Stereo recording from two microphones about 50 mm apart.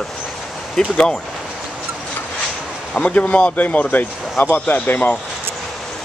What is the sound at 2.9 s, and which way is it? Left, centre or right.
Speech, left.